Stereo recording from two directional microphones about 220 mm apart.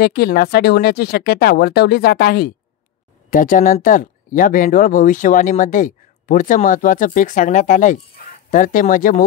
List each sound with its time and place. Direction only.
0.0 s speech: 45° left (ahead or behind)